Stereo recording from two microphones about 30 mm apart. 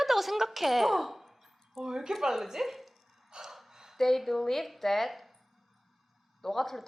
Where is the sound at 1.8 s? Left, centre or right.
Centre.